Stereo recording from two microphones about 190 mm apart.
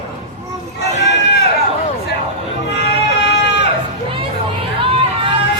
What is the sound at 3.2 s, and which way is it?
Sheep, 65° left (ahead or behind).